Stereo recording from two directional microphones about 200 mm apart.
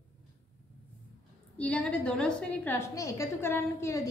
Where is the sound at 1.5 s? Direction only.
5° left (ahead or behind).